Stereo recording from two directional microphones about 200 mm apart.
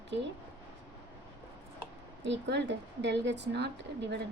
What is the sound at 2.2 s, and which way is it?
A woman's voice, 60° right (ahead or behind).